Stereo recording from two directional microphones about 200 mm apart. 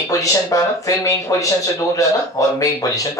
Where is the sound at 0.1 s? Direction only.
15° left (ahead or behind).